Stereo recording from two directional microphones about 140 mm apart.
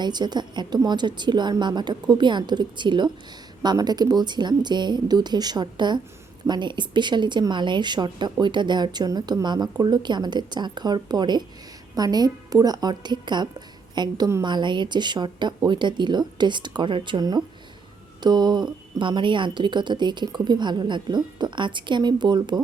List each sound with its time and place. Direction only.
0.0 s a woman's voice: 30° right (ahead or behind)